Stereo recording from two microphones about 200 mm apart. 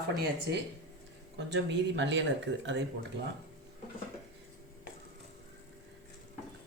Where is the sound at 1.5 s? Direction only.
65° right (ahead or behind).